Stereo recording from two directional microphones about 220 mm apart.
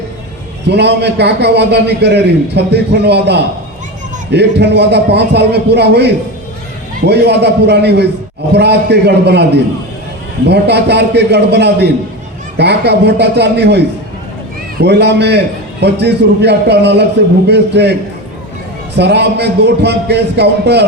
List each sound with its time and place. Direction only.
0.7 s a man's voice: 50° right (ahead or behind)
18.9 s a man's voice: 50° right (ahead or behind)